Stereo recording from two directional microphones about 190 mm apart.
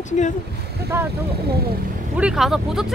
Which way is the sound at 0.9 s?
10° right (ahead or behind).